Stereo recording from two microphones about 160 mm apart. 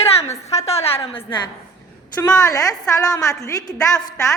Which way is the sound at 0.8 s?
35° left (ahead or behind).